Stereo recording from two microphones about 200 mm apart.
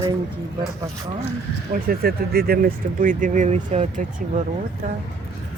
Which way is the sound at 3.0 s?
40° right (ahead or behind).